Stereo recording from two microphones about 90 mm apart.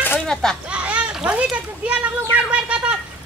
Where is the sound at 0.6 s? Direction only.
15° right (ahead or behind).